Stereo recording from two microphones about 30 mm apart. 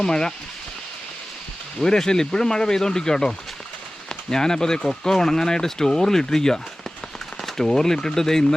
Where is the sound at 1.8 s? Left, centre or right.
Left.